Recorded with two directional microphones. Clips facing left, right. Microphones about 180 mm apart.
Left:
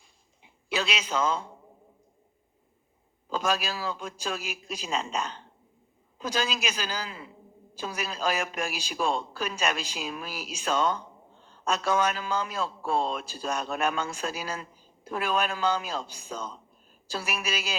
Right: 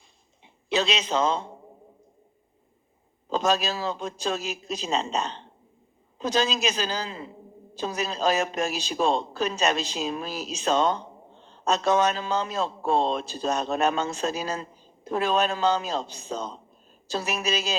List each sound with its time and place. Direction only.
0.4 s a man's voice: 35° right (ahead or behind)
3.2 s a man's voice: 35° right (ahead or behind)